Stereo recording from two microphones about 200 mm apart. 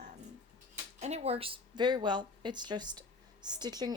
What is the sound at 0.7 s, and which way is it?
A woman's voice, 35° right (ahead or behind).